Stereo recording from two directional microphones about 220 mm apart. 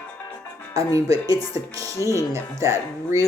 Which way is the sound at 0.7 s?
15° right (ahead or behind).